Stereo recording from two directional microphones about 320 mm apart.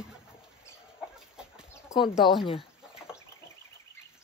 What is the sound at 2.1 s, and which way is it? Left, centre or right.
Speech, centre.